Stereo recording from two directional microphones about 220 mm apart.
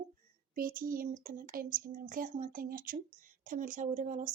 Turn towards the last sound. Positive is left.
turn(degrees=-35)  # may be behind; listen again after turning